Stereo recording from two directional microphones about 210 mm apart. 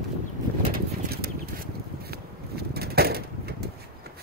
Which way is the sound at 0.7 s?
50° right (ahead or behind).